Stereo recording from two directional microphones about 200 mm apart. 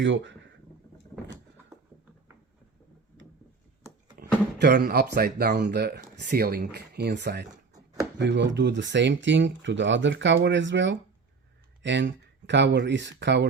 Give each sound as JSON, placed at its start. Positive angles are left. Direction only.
{"t": 0.0, "sound": "speech", "side_deg": -65}
{"t": 4.2, "sound": "music", "side_deg": -50}
{"t": 4.6, "sound": "speech", "side_deg": -55}